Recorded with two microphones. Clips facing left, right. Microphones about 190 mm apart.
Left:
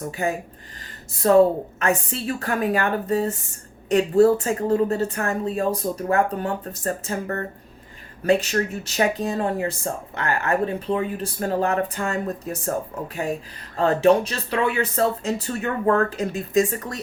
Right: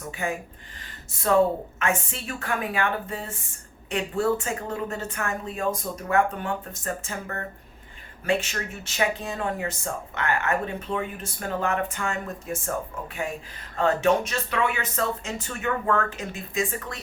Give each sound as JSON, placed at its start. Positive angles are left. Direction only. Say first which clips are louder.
{"t": 0.1, "sound": "speech", "louder": "left 1 dB", "side_deg": 35}
{"t": 13.7, "sound": "speech", "louder": "left 5 dB", "side_deg": 35}